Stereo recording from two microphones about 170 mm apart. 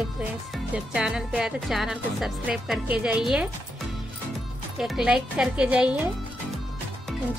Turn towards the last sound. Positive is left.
turn(degrees=-5)  # may be behind; listen again after turning